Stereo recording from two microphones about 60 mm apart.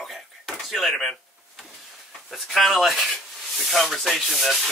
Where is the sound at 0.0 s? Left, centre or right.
Centre.